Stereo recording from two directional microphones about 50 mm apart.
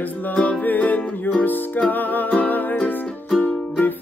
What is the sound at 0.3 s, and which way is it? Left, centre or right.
Music, left.